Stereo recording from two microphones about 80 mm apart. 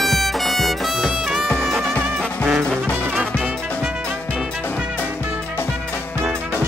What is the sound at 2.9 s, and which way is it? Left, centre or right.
Music, right.